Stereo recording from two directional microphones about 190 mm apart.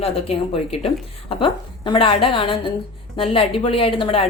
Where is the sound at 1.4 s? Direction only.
25° left (ahead or behind).